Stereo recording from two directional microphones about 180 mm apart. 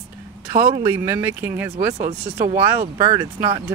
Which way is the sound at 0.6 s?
50° right (ahead or behind).